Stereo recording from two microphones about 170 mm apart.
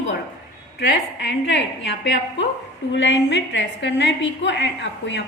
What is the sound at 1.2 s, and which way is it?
A woman's voice, 90° left.